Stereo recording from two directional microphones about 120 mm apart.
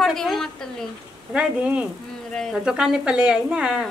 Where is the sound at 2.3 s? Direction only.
5° left (ahead or behind).